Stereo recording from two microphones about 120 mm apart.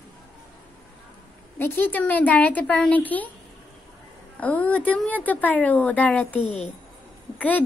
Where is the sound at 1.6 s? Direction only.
15° left (ahead or behind).